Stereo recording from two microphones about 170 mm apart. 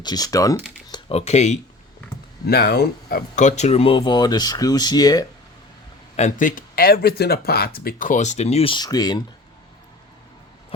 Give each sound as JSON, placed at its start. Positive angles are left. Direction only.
{"t": 0.0, "sound": "speech", "side_deg": 25}
{"t": 2.5, "sound": "speech", "side_deg": 65}
{"t": 3.3, "sound": "speech", "side_deg": 45}
{"t": 6.1, "sound": "speech", "side_deg": 45}